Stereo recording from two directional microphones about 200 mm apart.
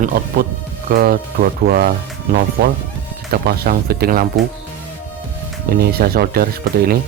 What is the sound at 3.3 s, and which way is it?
Speech, 50° right (ahead or behind).